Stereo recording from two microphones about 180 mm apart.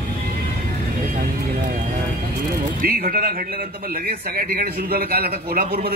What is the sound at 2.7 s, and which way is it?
A man's voice, 50° right (ahead or behind).